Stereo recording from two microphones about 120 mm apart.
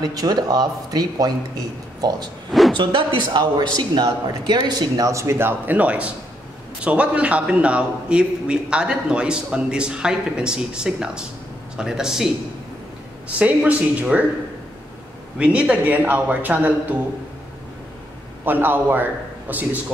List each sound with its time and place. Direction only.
0.0 s a man's voice: 30° right (ahead or behind); by 12.3 s 5° right (ahead or behind)
13.4 s a man's voice: 10° right (ahead or behind)
15.3 s a man's voice: 10° right (ahead or behind)
18.4 s a man's voice: 15° right (ahead or behind)